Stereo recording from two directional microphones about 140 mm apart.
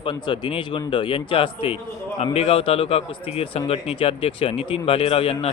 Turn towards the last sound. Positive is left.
turn(degrees=45)  # may be behind; listen again after turning